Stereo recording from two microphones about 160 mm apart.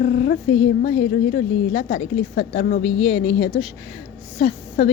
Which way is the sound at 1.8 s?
90° left.